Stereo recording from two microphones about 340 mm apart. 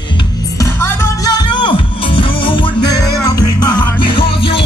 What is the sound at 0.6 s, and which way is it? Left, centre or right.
Music, centre.